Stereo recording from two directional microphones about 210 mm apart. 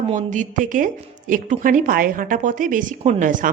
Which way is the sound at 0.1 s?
35° right (ahead or behind).